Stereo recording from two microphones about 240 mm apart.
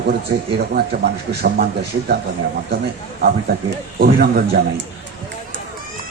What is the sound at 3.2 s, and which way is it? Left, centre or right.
A man's voice, right.